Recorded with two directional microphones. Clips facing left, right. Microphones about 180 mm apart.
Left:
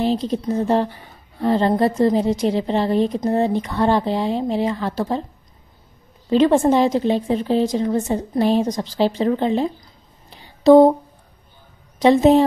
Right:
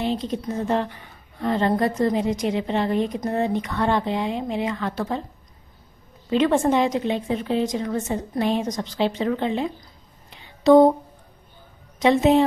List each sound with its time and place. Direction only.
0.0 s a woman's voice: 35° left (ahead or behind)
6.3 s a woman's voice: 35° left (ahead or behind)
10.3 s a sound: 35° left (ahead or behind)
12.0 s a woman's voice: 35° left (ahead or behind)